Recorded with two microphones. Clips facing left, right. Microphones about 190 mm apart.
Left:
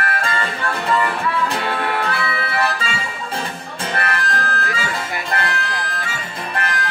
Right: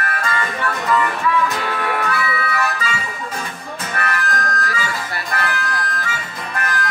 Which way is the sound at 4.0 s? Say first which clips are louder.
Right 1 dB; 30° left (ahead or behind).